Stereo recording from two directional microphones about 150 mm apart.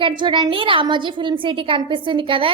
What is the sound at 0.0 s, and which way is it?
A woman's voice, 30° right (ahead or behind).